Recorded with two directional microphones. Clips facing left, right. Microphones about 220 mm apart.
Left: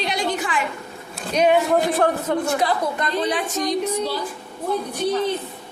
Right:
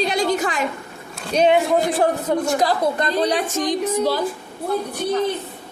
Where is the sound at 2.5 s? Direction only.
40° right (ahead or behind).